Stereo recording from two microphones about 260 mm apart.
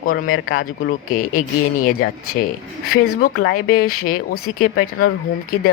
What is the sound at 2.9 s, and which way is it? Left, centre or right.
Speech, left.